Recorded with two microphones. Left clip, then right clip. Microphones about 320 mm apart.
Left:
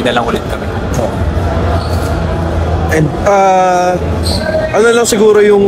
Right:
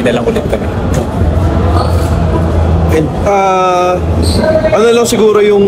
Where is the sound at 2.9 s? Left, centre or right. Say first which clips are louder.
Left 1 dB; left.